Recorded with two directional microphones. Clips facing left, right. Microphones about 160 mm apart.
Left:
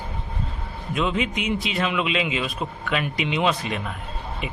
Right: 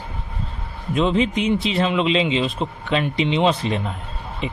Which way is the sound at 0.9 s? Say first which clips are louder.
Right 6 dB; 30° right (ahead or behind).